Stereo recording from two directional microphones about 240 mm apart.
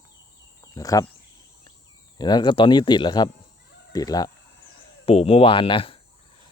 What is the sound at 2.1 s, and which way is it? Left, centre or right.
Speech, centre.